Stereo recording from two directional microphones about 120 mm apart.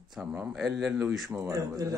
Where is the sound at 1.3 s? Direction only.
25° right (ahead or behind).